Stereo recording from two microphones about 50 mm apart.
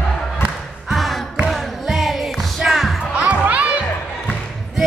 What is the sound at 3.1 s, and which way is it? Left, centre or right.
Music, right.